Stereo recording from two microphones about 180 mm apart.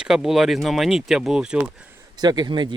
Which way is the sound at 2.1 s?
20° right (ahead or behind).